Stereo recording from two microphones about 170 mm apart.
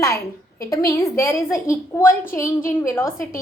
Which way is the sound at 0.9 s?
15° left (ahead or behind).